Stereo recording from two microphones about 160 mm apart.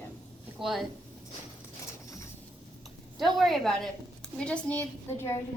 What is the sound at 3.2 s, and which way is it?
A woman's voice, centre (ahead or behind).